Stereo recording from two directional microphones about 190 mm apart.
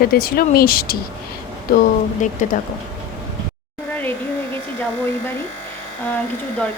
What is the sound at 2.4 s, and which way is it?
Speech, 40° left (ahead or behind).